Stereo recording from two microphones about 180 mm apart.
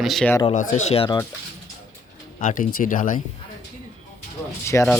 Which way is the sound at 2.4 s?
45° left (ahead or behind).